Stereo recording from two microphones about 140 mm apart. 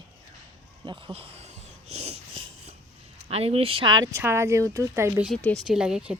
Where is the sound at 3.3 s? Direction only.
45° right (ahead or behind); by 5.3 s 20° right (ahead or behind).